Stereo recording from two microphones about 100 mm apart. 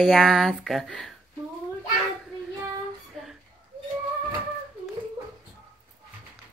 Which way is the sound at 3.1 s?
Centre (ahead or behind).